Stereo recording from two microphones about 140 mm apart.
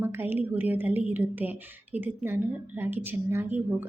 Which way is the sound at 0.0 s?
15° right (ahead or behind).